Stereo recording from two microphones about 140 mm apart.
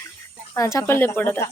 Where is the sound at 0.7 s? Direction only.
20° left (ahead or behind).